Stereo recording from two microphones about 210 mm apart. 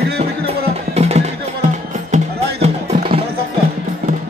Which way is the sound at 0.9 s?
30° right (ahead or behind).